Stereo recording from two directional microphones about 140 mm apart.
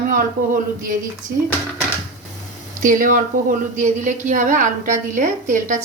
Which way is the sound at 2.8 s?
70° right (ahead or behind).